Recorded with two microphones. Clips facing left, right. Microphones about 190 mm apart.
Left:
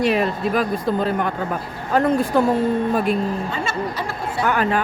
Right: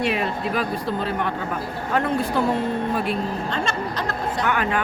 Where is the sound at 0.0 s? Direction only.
40° left (ahead or behind).